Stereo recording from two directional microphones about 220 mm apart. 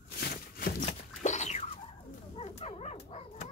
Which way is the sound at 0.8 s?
30° left (ahead or behind).